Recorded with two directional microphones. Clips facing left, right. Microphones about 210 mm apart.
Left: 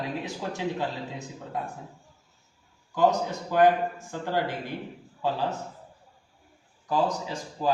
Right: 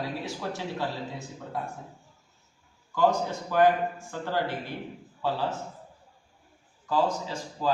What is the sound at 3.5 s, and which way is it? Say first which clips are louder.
A man's voice: left 1 dB; 20° left (ahead or behind).